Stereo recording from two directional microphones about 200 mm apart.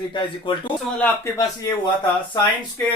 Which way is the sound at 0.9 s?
10° left (ahead or behind).